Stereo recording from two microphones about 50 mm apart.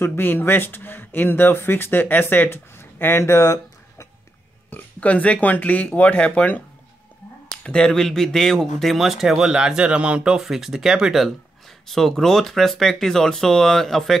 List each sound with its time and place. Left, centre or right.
0.0 s speech: left
5.0 s speech: left
7.6 s speech: centre; by 10.4 s right
10.4 s speech: centre
11.9 s speech: centre